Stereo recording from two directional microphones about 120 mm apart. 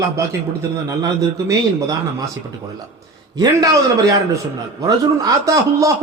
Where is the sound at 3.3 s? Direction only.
30° right (ahead or behind).